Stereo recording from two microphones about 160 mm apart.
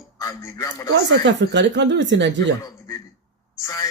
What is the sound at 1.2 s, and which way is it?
Speech, 90° right.